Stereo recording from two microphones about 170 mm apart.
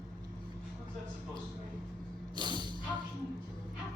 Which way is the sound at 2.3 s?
25° right (ahead or behind).